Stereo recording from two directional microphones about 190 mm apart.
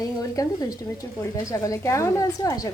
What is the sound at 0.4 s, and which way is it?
Speech, 15° left (ahead or behind).